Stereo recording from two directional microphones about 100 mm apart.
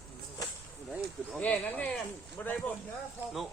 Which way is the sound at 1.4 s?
15° left (ahead or behind).